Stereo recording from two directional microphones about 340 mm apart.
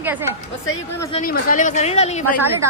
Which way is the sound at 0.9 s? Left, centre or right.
Centre.